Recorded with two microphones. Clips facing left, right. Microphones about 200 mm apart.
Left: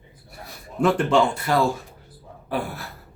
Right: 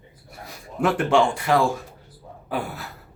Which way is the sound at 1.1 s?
15° right (ahead or behind).